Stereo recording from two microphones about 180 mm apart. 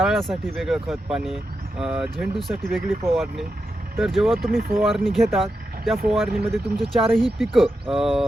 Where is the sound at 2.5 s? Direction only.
50° right (ahead or behind).